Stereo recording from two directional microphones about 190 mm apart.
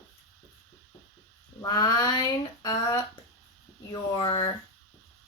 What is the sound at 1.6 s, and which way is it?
Speech, 20° left (ahead or behind).